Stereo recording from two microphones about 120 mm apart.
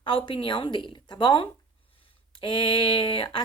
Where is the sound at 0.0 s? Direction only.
45° left (ahead or behind).